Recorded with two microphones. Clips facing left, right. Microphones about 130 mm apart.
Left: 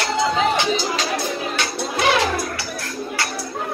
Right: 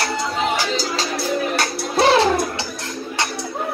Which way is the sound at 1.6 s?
35° right (ahead or behind).